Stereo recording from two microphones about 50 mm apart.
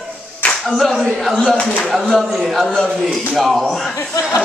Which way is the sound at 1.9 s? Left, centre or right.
Centre.